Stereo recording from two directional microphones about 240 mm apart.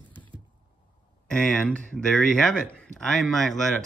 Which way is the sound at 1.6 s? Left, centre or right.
Centre.